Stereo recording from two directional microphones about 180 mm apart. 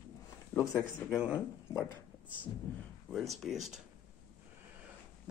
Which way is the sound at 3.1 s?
Centre (ahead or behind).